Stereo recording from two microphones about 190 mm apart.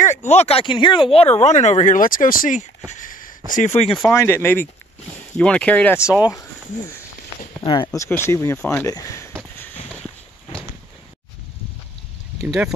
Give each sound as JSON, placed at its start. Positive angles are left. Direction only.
{"t": 0.3, "sound": "speech", "side_deg": 35}
{"t": 4.1, "sound": "speech", "side_deg": 15}
{"t": 5.9, "sound": "speech", "side_deg": -5}
{"t": 7.6, "sound": "speech", "side_deg": 25}
{"t": 12.4, "sound": "speech", "side_deg": -5}